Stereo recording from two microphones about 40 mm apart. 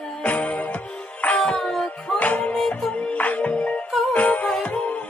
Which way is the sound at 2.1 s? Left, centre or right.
Left.